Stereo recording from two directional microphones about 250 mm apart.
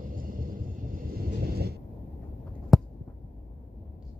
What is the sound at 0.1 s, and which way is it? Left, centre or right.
Vehicle, right.